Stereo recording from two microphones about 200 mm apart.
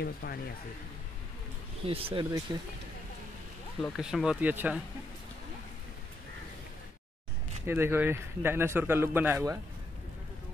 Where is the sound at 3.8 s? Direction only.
Centre (ahead or behind).